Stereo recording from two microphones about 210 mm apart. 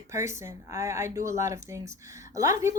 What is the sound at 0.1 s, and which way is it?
A woman's voice, 15° right (ahead or behind).